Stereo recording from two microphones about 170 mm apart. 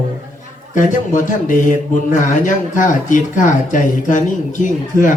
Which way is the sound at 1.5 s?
50° left (ahead or behind).